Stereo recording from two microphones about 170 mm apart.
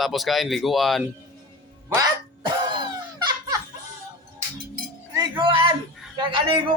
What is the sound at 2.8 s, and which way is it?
Dog, 25° right (ahead or behind).